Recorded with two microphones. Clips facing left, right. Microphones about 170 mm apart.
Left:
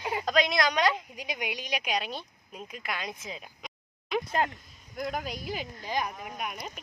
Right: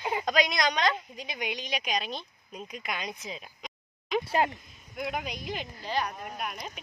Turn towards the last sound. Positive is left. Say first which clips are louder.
# even
turn(degrees=5)  # may be behind; listen again after turning